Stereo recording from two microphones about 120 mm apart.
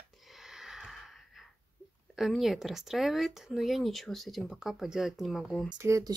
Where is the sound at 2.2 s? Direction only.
Centre (ahead or behind).